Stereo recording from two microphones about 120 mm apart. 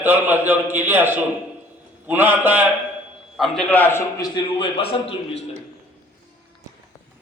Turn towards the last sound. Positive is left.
turn(degrees=55)  # may be behind; listen again after turning